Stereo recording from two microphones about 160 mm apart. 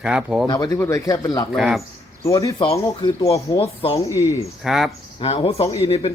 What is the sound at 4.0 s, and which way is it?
Speech, 20° left (ahead or behind).